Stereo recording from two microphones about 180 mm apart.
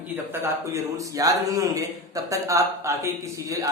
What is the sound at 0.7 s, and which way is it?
A man's voice, 20° right (ahead or behind).